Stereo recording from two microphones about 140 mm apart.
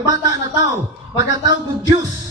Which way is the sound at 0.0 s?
25° right (ahead or behind).